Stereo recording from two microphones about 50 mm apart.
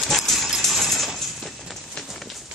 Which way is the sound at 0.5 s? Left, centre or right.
Centre.